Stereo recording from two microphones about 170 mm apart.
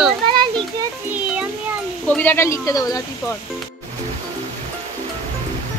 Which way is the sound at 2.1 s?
10° left (ahead or behind).